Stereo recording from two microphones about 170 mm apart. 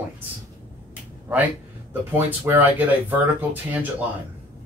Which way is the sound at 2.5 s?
10° right (ahead or behind).